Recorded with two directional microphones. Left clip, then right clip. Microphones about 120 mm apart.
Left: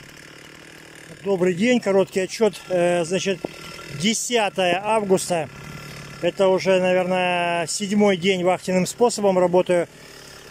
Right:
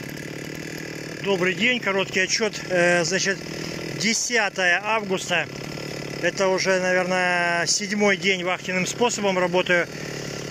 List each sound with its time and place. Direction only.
1.2 s speech: 50° left (ahead or behind)
2.2 s speech: 30° left (ahead or behind)
5.1 s speech: 45° left (ahead or behind)
6.2 s speech: 20° left (ahead or behind)
8.5 s speech: 45° left (ahead or behind)